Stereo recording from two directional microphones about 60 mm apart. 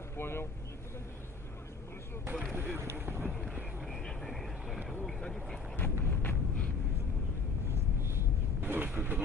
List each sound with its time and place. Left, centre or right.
0.2 s speech: left
2.5 s boat: right
3.8 s vehicle: centre
5.8 s a sound: left
8.5 s vehicle: right